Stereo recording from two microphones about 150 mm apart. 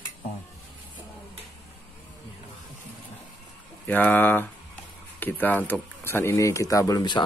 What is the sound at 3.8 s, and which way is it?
A man's voice, 10° left (ahead or behind).